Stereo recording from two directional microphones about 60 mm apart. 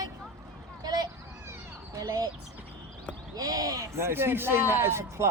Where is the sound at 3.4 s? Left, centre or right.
Right.